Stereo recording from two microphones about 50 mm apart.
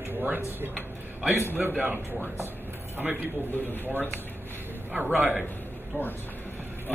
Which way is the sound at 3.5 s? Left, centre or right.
Left.